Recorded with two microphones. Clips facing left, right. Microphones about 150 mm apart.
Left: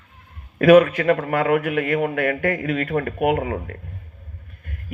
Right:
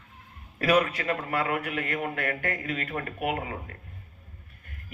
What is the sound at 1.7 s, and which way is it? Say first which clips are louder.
Speech: left 10 dB; 40° right (ahead or behind).